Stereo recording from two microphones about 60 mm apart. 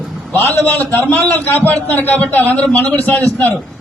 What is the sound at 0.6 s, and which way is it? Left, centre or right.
A man's voice, left.